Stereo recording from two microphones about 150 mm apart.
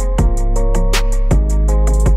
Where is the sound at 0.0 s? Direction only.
Centre (ahead or behind).